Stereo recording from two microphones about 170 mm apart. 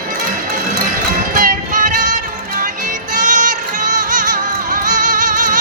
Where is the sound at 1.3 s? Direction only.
50° right (ahead or behind).